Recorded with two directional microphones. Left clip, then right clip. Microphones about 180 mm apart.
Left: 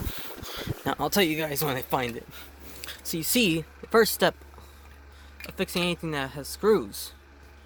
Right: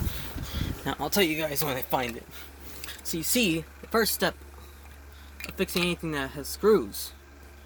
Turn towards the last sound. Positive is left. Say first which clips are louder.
# right 1 dB
turn(degrees=45)  # may be behind; listen again after turning